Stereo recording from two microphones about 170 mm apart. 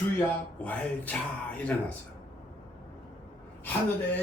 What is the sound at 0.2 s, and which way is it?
Speech, 10° left (ahead or behind).